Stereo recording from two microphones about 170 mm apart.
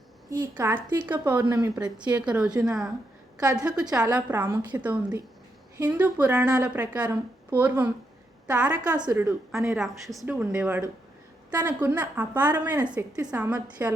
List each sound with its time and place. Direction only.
0.3 s a woman's voice: 20° right (ahead or behind)
1.6 s speech: 20° right (ahead or behind)
2.1 s a woman's voice: 5° right (ahead or behind)